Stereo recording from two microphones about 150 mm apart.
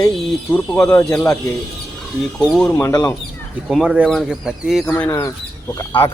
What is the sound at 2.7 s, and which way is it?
Speech, 20° left (ahead or behind).